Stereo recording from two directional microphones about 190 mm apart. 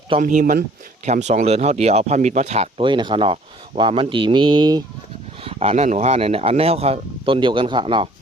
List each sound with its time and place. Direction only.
0.2 s speech: 45° right (ahead or behind); by 8.1 s 25° right (ahead or behind)